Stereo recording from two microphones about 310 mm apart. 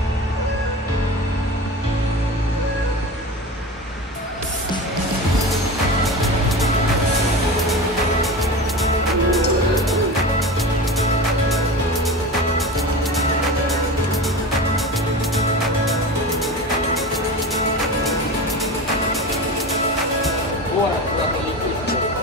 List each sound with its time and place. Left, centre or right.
9.3 s music: centre